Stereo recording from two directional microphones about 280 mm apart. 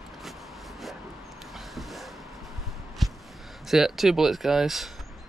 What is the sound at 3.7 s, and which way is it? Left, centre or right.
Speech, centre.